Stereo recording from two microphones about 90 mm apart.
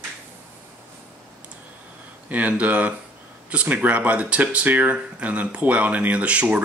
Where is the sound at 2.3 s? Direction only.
15° right (ahead or behind).